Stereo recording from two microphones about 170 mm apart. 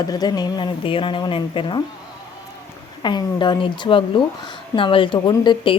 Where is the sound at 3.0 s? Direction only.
25° left (ahead or behind).